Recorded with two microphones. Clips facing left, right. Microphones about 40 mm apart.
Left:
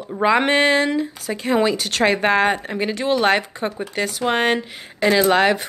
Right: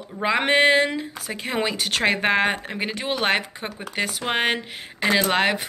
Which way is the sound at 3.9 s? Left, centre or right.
Centre.